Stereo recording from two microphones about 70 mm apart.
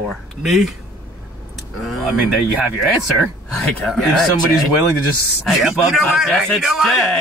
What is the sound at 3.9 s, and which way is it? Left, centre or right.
Speech, centre.